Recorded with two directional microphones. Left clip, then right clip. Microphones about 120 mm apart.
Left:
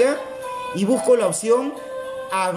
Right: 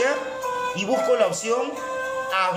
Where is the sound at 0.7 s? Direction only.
60° left (ahead or behind).